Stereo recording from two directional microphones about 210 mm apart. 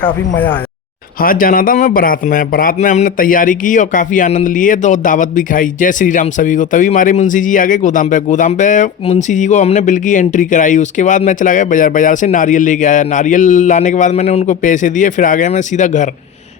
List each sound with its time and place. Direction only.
0.3 s speech: 10° left (ahead or behind)
1.2 s a man's voice: 40° left (ahead or behind)